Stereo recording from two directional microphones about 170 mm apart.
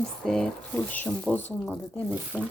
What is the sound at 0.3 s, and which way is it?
Speech, 5° left (ahead or behind).